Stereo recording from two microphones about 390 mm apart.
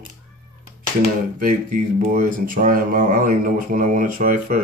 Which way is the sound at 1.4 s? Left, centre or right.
Centre.